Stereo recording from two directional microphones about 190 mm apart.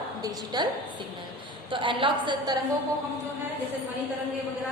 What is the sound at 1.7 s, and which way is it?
Speech, 25° right (ahead or behind).